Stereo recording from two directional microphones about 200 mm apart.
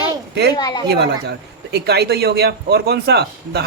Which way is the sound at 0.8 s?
55° right (ahead or behind).